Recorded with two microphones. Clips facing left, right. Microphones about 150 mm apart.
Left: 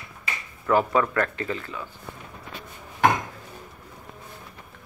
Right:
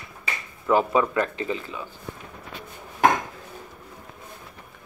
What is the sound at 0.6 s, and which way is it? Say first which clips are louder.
Speech: right 1 dB; 15° right (ahead or behind).